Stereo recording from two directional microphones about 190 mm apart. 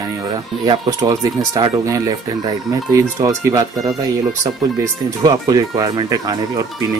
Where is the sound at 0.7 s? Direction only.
20° right (ahead or behind).